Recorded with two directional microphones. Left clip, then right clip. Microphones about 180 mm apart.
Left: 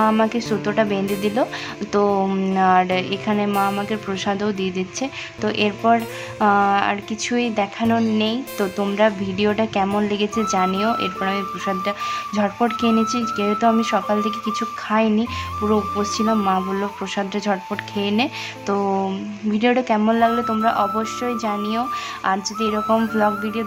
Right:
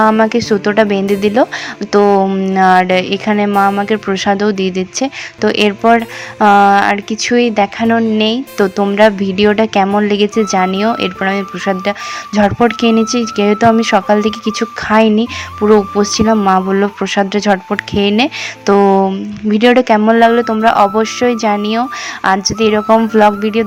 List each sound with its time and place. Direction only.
0.1 s speech: 25° right (ahead or behind)
2.6 s a woman's voice: 30° right (ahead or behind)
22.9 s a woman's voice: 20° right (ahead or behind)